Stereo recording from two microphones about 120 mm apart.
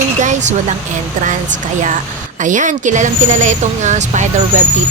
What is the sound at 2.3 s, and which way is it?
A woman's voice, 90° right.